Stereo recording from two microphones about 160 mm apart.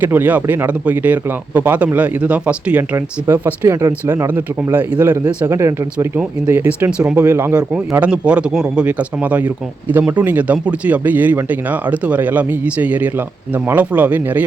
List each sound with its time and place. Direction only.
0.0 s speech: 10° right (ahead or behind)